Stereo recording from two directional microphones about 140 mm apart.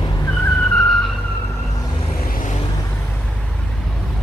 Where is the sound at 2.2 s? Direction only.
85° left.